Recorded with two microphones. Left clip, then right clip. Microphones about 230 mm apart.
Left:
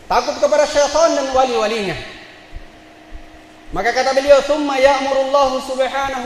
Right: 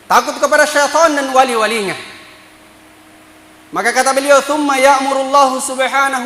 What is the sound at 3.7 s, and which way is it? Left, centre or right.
A man's voice, right.